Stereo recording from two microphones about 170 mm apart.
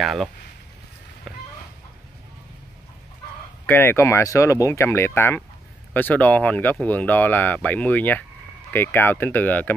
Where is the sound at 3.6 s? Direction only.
15° left (ahead or behind).